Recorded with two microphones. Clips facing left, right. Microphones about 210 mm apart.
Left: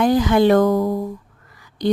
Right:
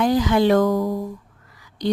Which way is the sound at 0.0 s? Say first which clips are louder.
Left 3 dB; 55° left (ahead or behind).